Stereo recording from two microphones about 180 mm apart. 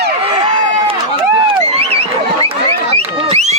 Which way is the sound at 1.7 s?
35° right (ahead or behind).